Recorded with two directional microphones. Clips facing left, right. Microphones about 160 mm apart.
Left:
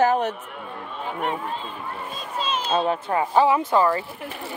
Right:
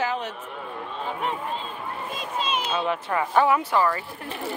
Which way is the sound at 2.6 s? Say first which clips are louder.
Left 3 dB; 35° left (ahead or behind).